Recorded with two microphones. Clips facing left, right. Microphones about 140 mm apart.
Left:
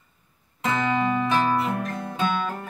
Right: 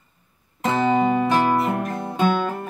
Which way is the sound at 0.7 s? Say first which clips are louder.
Right 5 dB; 30° right (ahead or behind).